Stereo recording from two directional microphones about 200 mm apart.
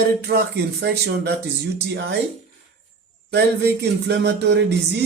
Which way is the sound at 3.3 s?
55° right (ahead or behind).